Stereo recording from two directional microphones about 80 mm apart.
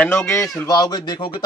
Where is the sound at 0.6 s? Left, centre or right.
Left.